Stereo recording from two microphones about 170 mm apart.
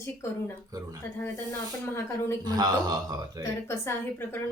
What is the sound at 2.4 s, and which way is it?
Speech, 25° right (ahead or behind).